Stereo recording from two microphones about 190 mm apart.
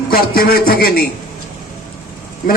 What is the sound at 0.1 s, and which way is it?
Speech, 55° left (ahead or behind).